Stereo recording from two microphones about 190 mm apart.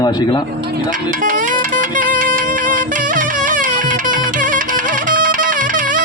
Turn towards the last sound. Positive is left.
turn(degrees=-45)  # may be behind; listen again after turning